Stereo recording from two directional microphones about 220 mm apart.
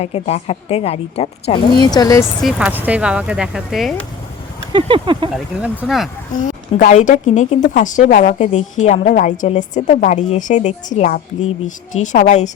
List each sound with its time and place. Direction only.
0.0 s a woman's voice: 30° left (ahead or behind)
2.4 s speech: 5° right (ahead or behind)
4.7 s speech: 20° right (ahead or behind)
5.3 s speech: 5° right (ahead or behind)
6.3 s a woman's voice: 35° left (ahead or behind)